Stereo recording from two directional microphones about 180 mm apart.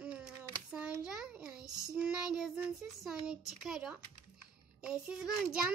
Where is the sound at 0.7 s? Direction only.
5° right (ahead or behind).